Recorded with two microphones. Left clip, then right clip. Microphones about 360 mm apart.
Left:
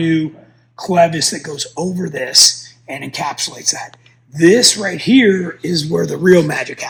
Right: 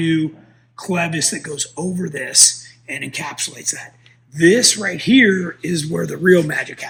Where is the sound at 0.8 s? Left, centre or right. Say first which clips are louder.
Left 8 dB; centre.